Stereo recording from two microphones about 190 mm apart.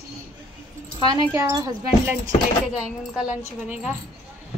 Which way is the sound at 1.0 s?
25° right (ahead or behind).